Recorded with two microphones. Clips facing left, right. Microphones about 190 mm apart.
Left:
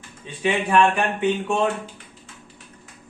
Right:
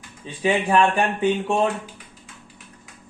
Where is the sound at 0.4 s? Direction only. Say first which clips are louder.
Even; 35° right (ahead or behind).